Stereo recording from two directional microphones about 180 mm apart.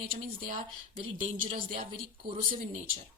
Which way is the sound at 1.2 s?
30° right (ahead or behind).